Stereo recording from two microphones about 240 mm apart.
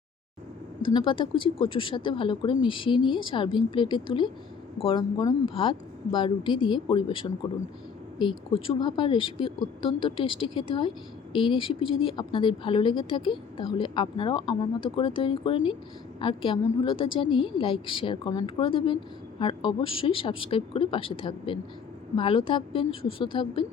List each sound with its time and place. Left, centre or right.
0.8 s speech: centre
8.5 s speech: left